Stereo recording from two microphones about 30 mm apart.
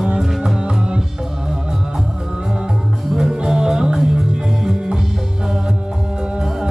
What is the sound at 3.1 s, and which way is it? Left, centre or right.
Music, centre.